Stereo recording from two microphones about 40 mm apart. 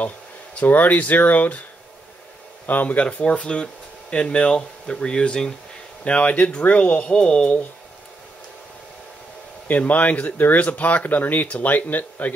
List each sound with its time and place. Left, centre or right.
0.6 s speech: left
2.6 s speech: left
3.3 s speech: left
6.2 s speech: left
7.1 s speech: left
9.7 s speech: left